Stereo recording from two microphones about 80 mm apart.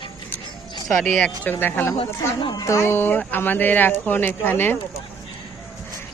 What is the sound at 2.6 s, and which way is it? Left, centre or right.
Speech, left.